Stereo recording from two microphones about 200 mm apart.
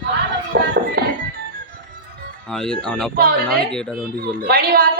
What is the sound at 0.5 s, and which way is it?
Music, 45° right (ahead or behind).